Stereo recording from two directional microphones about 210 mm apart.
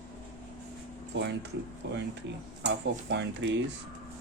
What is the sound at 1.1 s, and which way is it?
Speech, 55° right (ahead or behind).